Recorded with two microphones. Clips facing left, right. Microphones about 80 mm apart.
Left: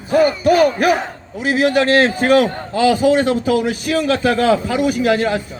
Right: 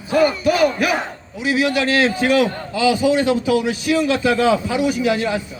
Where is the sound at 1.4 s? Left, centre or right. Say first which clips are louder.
Left 3 dB; left.